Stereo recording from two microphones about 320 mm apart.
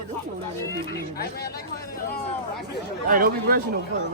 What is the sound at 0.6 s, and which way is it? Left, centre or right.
Speech, centre.